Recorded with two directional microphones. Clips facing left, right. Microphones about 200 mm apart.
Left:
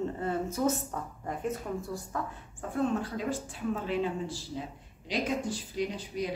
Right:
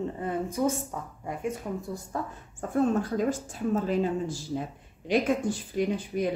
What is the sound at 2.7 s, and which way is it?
Speech, 45° right (ahead or behind).